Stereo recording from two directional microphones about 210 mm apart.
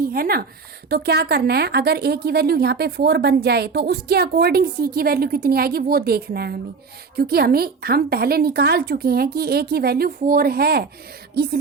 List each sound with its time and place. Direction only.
0.0 s a woman's voice: 45° right (ahead or behind)